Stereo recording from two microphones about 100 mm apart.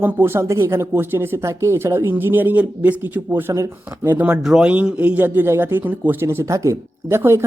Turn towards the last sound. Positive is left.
turn(degrees=-25)  # may be behind; listen again after turning